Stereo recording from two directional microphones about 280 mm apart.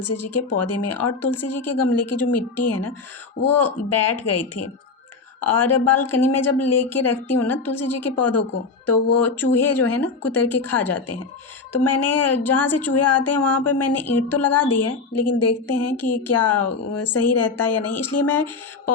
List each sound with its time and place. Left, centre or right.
0.0 s a woman's voice: left